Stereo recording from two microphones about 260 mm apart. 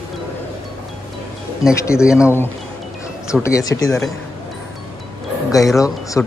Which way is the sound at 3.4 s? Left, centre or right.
Centre.